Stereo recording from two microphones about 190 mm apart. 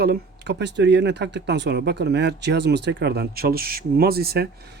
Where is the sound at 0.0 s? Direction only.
60° right (ahead or behind).